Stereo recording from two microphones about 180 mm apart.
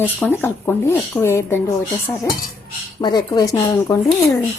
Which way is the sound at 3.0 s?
25° left (ahead or behind).